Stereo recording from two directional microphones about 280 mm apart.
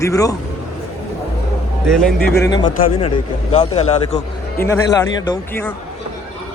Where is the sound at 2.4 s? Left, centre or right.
Centre.